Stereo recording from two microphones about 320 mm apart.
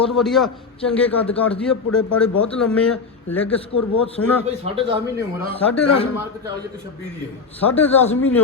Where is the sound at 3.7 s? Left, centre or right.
Left.